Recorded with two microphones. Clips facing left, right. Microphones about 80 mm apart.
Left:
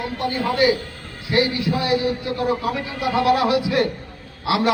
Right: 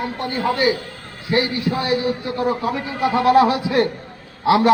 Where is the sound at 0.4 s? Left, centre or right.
Right.